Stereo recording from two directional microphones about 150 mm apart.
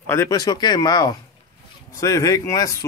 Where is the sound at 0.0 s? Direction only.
15° left (ahead or behind).